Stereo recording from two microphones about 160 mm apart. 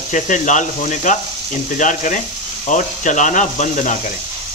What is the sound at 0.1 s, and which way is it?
Speech, 50° left (ahead or behind).